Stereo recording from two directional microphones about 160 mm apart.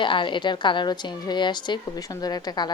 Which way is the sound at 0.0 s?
30° left (ahead or behind).